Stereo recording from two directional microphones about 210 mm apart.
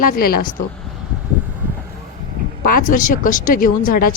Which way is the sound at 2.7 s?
40° left (ahead or behind).